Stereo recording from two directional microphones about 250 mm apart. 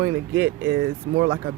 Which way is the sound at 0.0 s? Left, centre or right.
Right.